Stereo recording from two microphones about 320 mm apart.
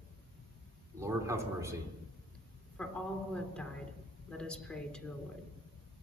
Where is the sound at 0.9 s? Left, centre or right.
Centre.